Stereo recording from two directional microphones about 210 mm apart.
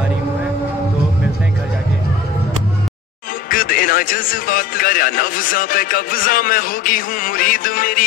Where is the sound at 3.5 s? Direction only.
40° left (ahead or behind).